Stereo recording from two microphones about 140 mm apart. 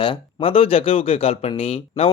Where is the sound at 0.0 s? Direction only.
40° left (ahead or behind).